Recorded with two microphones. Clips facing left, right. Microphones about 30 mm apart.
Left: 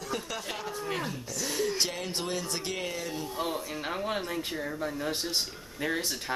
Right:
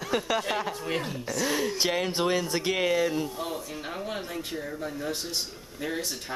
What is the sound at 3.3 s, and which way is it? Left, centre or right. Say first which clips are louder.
Speech: left 1 dB; centre.